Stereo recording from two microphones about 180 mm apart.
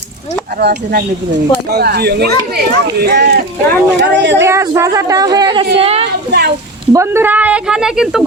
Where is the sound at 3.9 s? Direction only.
75° right (ahead or behind).